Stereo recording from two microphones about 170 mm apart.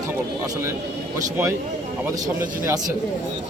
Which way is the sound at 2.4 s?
15° right (ahead or behind).